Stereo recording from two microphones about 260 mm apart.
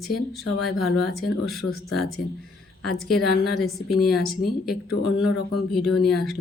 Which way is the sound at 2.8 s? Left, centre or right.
Centre.